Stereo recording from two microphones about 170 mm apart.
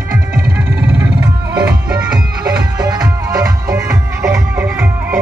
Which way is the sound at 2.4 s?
20° right (ahead or behind).